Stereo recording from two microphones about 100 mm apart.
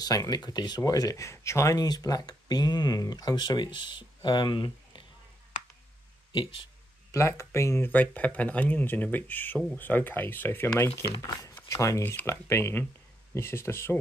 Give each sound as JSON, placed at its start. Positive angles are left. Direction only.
{"t": 0.0, "sound": "speech", "side_deg": 40}
{"t": 6.3, "sound": "speech", "side_deg": 60}
{"t": 7.1, "sound": "speech", "side_deg": 30}
{"t": 7.9, "sound": "speech", "side_deg": 15}
{"t": 11.1, "sound": "speech", "side_deg": 35}